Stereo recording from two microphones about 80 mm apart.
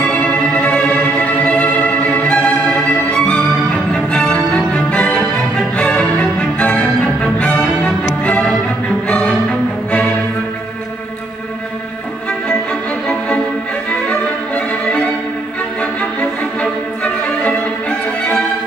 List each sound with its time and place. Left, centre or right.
0.0 s music: centre
13.8 s violin: centre
15.8 s music: centre